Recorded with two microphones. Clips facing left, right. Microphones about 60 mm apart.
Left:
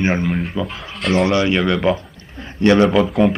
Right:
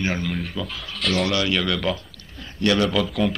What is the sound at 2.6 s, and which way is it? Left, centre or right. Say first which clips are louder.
Speech: left 7 dB; left.